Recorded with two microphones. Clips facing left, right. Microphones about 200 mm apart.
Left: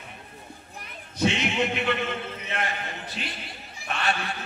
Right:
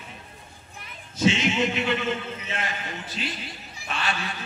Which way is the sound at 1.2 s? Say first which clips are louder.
Right 2 dB; 60° left (ahead or behind).